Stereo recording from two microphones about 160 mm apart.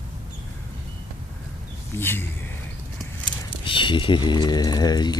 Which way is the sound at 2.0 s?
15° left (ahead or behind).